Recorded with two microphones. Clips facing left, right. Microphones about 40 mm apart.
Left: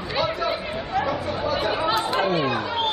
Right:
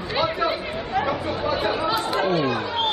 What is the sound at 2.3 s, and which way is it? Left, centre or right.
Chatter, centre.